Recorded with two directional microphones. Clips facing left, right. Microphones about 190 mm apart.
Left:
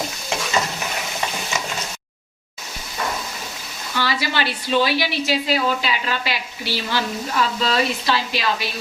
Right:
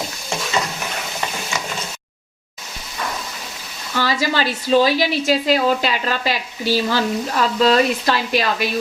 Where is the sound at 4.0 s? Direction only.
45° right (ahead or behind).